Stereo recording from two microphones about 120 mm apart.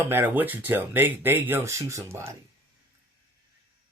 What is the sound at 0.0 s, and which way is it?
Speech, 20° right (ahead or behind).